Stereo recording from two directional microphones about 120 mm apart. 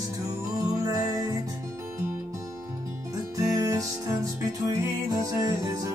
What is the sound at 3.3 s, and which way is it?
Music, 25° right (ahead or behind).